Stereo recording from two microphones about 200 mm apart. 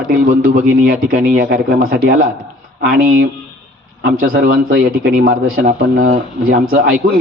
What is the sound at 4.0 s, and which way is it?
A man's voice, 90° right.